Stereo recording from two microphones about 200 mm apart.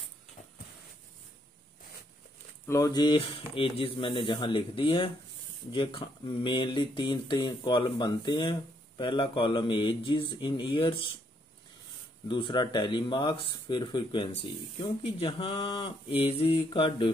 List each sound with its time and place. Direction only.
2.6 s speech: 15° left (ahead or behind)
12.3 s speech: 25° left (ahead or behind)